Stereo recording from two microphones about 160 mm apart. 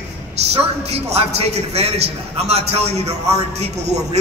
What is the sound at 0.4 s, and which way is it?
A man's voice, 40° right (ahead or behind).